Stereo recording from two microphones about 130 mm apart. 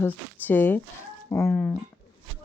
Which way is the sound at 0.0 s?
15° left (ahead or behind).